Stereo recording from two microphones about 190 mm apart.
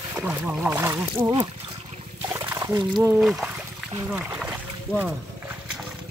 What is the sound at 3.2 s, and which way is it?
Speech, centre (ahead or behind).